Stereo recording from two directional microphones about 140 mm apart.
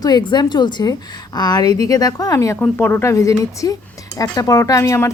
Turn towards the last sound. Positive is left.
turn(degrees=20)  # may be behind; listen again after turning